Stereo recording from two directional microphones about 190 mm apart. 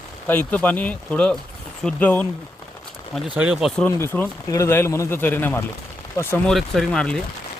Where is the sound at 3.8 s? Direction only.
10° left (ahead or behind).